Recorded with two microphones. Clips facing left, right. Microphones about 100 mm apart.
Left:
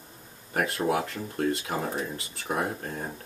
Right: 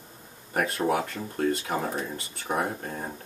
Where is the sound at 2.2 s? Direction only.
30° right (ahead or behind).